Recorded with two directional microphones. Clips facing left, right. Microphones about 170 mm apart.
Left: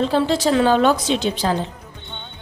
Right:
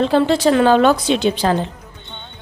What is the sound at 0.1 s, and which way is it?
A woman's voice, 60° right (ahead or behind).